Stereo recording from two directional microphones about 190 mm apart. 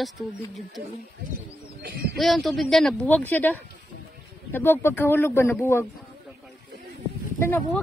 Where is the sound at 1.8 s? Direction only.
60° right (ahead or behind).